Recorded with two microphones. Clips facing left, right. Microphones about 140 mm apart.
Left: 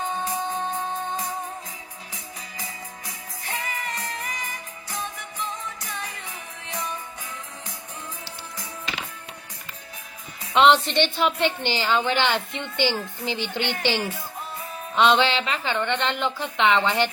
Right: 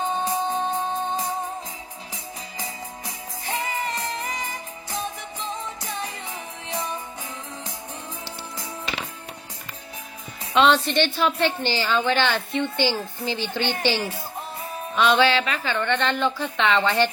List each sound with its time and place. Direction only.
0.0 s music: 30° right (ahead or behind)
3.4 s music: 30° right (ahead or behind)
10.5 s a woman's voice: 20° left (ahead or behind)
14.0 s speech: 30° right (ahead or behind)
14.9 s speech: 20° left (ahead or behind)